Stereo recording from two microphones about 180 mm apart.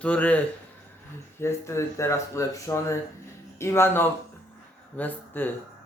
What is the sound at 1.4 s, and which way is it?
Speech, 15° left (ahead or behind).